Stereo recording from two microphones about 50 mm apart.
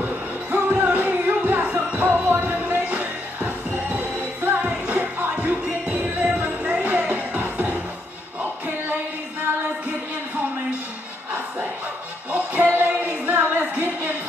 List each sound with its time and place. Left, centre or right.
0.0 s music: right
12.3 s music: right
13.5 s a sound: right